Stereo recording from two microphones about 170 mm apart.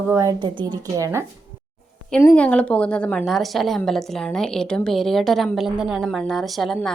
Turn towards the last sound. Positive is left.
turn(degrees=0)  # may be behind; listen again after turning